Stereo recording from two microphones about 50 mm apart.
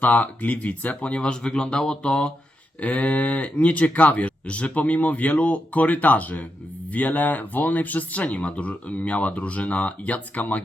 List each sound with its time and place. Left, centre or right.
0.0 s speech: left; by 1.8 s centre
1.8 s mantra: centre
2.8 s speech: left